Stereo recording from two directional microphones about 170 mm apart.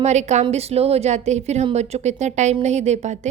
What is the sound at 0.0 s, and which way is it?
A woman's voice, 40° right (ahead or behind).